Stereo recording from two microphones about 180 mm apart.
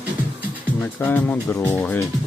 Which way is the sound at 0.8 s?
10° left (ahead or behind).